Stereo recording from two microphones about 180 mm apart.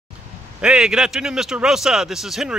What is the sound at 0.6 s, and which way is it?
Speech, 5° right (ahead or behind).